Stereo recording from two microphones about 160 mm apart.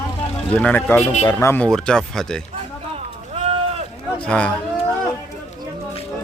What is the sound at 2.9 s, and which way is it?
Run, 40° right (ahead or behind).